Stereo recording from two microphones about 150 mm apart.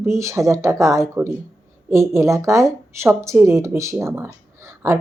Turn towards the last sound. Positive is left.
turn(degrees=-20)  # may be behind; listen again after turning